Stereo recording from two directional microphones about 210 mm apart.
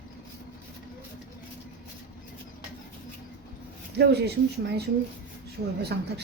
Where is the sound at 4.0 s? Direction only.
50° right (ahead or behind).